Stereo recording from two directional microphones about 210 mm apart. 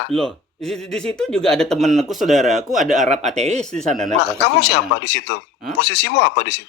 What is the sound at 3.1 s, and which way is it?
Speech, 35° right (ahead or behind).